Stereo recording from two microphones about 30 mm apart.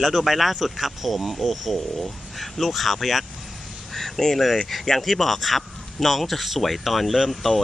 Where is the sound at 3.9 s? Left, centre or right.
Centre.